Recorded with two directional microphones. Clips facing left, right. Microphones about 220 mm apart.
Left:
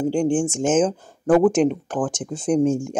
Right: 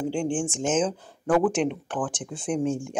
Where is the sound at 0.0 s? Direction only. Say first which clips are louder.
Left 6 dB; 40° left (ahead or behind).